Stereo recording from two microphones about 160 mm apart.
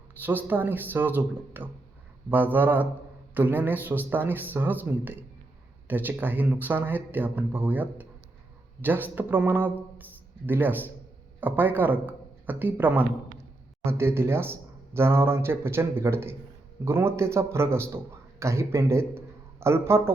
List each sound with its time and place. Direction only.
0.2 s a man's voice: 10° right (ahead or behind)